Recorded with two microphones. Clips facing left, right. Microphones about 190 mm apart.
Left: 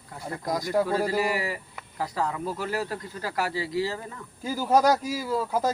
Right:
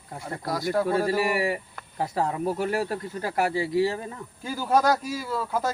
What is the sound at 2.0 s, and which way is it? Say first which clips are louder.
Speech: right 3 dB; 25° right (ahead or behind).